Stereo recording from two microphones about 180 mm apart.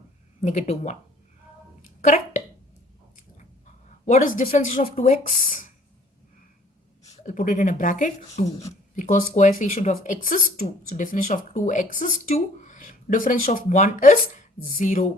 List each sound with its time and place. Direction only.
0.4 s speech: 40° left (ahead or behind)
2.0 s speech: 45° left (ahead or behind)
4.0 s speech: 45° left (ahead or behind)
7.3 s speech: 45° left (ahead or behind)